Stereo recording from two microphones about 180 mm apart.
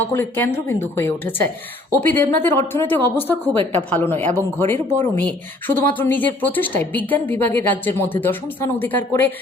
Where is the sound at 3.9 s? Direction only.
10° left (ahead or behind).